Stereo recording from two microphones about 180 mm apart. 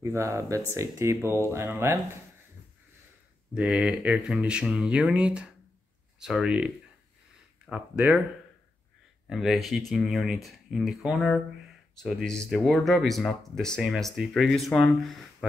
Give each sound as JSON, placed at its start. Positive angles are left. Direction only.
{"t": 0.0, "sound": "speech", "side_deg": -15}
{"t": 3.5, "sound": "speech", "side_deg": -5}
{"t": 9.3, "sound": "speech", "side_deg": 0}